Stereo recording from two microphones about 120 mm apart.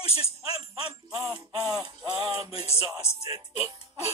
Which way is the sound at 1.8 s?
40° right (ahead or behind).